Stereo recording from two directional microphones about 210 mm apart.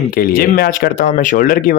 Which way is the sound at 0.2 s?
45° left (ahead or behind).